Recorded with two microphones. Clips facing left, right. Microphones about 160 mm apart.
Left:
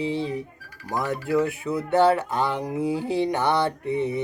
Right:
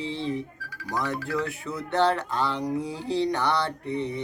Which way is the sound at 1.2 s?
20° left (ahead or behind).